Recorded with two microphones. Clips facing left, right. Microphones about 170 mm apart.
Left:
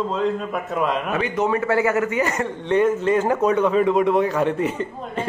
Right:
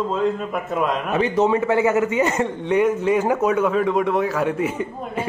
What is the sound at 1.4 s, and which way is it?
A man's voice, 20° right (ahead or behind).